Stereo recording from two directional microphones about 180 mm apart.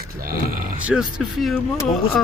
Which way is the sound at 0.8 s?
5° right (ahead or behind).